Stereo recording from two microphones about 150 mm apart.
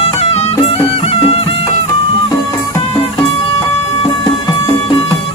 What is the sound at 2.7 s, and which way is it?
Music, 30° left (ahead or behind).